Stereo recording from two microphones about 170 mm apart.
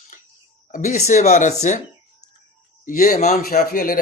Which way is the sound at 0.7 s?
45° left (ahead or behind).